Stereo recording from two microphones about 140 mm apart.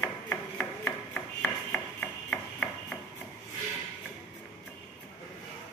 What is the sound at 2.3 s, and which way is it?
Hammer, 10° left (ahead or behind).